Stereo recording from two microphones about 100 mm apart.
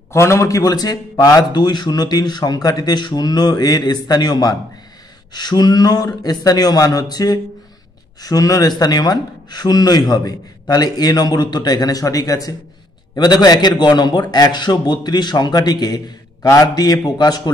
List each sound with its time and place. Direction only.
0.1 s a man's voice: 30° left (ahead or behind)